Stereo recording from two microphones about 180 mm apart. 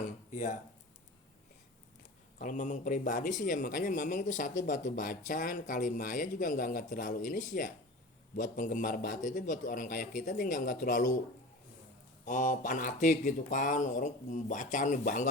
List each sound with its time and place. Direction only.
0.0 s a sound: 40° left (ahead or behind)
2.4 s speech: 45° left (ahead or behind)
12.2 s speech: 45° left (ahead or behind)